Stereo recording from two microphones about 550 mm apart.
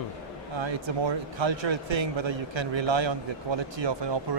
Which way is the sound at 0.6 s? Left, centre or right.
Right.